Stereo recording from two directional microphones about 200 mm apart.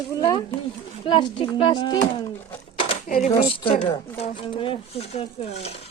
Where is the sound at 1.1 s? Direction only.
25° left (ahead or behind).